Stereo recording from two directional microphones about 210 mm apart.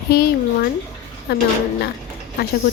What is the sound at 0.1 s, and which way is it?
Speech, 50° left (ahead or behind).